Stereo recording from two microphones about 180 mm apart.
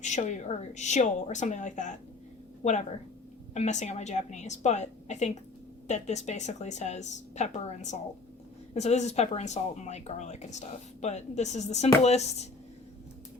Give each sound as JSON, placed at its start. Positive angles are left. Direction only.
{"t": 0.0, "sound": "a woman's voice", "side_deg": 40}
{"t": 3.5, "sound": "speech", "side_deg": 40}